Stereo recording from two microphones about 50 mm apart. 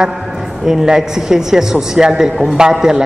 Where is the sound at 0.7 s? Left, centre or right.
Centre.